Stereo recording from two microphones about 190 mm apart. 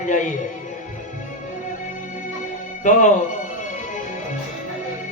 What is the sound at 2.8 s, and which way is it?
Speech, 40° left (ahead or behind).